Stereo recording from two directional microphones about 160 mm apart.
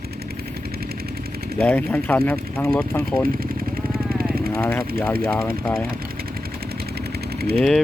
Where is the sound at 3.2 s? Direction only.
65° right (ahead or behind).